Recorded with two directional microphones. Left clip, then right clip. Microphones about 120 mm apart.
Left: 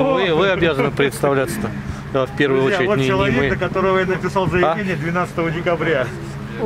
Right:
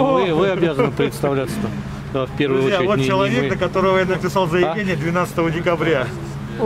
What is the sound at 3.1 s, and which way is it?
Speech, 25° right (ahead or behind).